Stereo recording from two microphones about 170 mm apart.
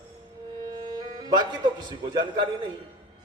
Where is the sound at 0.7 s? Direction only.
25° right (ahead or behind).